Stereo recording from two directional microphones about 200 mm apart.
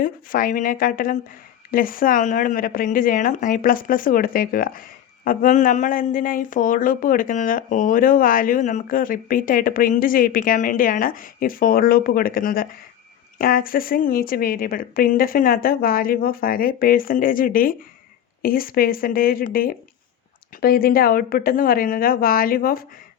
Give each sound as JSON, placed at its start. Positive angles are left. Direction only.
{"t": 0.0, "sound": "speech", "side_deg": 45}